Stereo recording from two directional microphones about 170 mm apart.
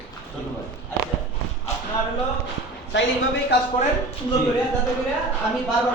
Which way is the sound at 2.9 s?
90° left.